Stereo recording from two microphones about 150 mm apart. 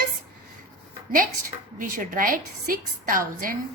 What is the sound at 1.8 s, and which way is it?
A woman's voice, 65° right (ahead or behind).